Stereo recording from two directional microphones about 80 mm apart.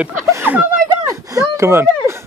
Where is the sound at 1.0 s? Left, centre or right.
Right.